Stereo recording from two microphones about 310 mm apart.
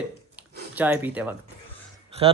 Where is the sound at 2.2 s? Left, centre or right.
Centre.